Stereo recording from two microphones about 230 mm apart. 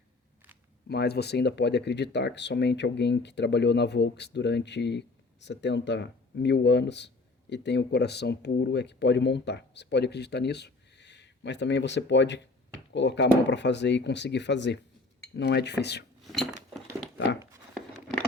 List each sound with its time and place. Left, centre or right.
0.9 s speech: left
16.2 s cutlery: centre
17.4 s a sound: centre